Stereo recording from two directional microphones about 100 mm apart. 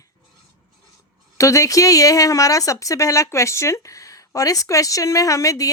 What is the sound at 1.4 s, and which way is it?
A woman's voice, 30° left (ahead or behind).